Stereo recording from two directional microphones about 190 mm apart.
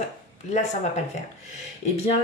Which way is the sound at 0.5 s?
35° left (ahead or behind).